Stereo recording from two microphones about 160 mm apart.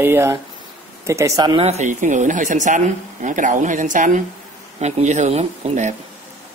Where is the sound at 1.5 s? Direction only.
45° right (ahead or behind).